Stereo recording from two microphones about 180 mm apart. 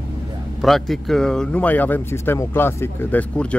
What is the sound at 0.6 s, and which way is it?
Speech, centre (ahead or behind).